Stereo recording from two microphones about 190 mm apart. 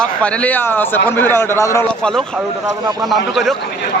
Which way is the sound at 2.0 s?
5° left (ahead or behind).